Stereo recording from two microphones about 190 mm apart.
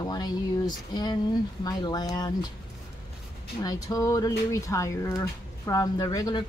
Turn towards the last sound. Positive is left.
turn(degrees=20)  # may be behind; listen again after turning